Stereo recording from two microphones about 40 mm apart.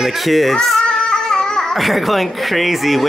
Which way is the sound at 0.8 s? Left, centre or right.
Centre.